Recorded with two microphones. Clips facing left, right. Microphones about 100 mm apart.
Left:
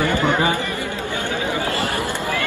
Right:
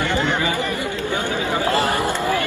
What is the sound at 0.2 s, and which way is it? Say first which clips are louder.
Chatter: left 3 dB; 50° left (ahead or behind).